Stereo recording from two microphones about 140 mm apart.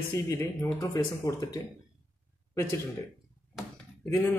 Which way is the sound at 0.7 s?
20° left (ahead or behind).